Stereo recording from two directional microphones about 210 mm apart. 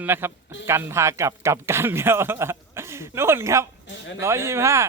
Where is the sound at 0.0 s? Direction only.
10° right (ahead or behind).